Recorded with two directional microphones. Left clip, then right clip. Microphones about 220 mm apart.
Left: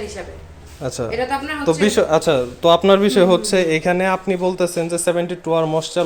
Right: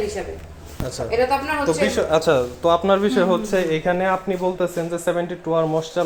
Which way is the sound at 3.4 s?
35° left (ahead or behind).